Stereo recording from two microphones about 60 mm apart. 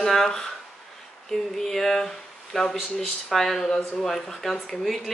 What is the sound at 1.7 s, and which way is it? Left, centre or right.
A woman's voice, centre.